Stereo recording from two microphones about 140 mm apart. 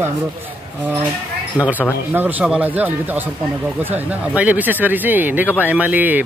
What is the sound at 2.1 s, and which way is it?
Speech, 15° right (ahead or behind).